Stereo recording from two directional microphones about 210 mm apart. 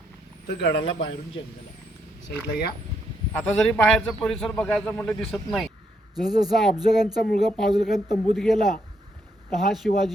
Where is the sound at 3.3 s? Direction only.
10° left (ahead or behind).